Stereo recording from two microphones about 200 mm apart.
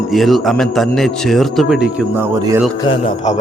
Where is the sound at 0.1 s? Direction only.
Centre (ahead or behind).